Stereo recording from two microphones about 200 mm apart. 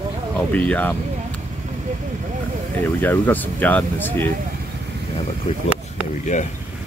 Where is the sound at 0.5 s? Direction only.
5° left (ahead or behind).